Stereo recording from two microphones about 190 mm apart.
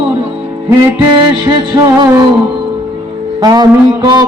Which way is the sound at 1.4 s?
20° right (ahead or behind).